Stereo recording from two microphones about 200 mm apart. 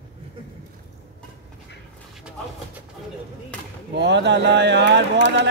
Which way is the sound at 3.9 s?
60° right (ahead or behind).